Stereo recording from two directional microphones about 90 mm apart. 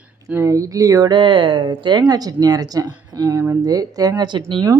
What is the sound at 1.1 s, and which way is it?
Speech, 65° right (ahead or behind).